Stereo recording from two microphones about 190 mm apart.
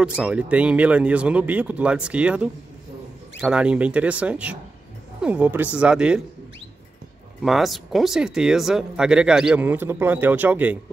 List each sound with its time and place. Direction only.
0.0 s speech: 5° right (ahead or behind)
7.4 s speech: centre (ahead or behind)